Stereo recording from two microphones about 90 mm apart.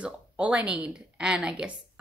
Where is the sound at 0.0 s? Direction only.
15° right (ahead or behind).